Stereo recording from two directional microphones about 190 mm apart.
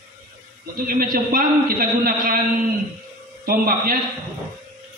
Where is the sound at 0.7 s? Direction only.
50° right (ahead or behind).